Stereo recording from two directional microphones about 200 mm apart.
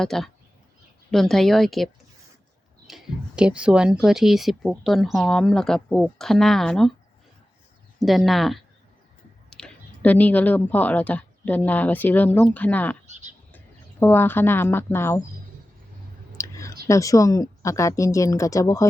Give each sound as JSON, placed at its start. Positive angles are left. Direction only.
{"t": 0.0, "sound": "speech", "side_deg": 0}
{"t": 7.9, "sound": "a woman's voice", "side_deg": 0}
{"t": 14.0, "sound": "a woman's voice", "side_deg": 10}
{"t": 16.4, "sound": "clicking", "side_deg": 15}
{"t": 16.8, "sound": "a woman's voice", "side_deg": 15}